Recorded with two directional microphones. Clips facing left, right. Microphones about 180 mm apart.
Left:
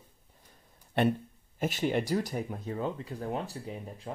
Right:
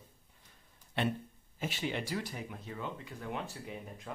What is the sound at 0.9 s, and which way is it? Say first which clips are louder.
Speech: left 7 dB; 50° left (ahead or behind).